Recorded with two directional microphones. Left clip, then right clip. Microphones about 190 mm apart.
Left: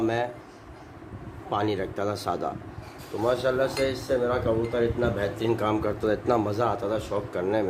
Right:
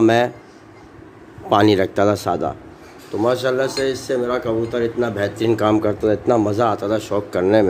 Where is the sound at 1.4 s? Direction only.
50° right (ahead or behind); by 2.5 s 30° right (ahead or behind).